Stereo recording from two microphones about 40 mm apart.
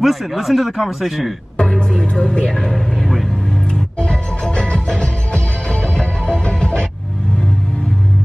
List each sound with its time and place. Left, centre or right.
0.0 s speech: centre
1.6 s music: left
2.7 s music: centre
4.0 s music: left